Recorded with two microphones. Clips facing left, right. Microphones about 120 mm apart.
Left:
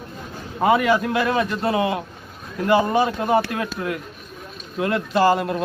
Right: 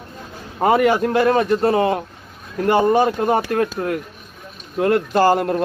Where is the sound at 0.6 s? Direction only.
40° right (ahead or behind).